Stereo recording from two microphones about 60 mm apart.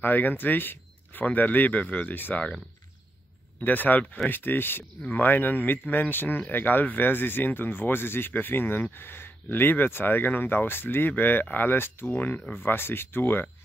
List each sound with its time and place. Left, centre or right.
0.0 s speech: left
3.6 s speech: left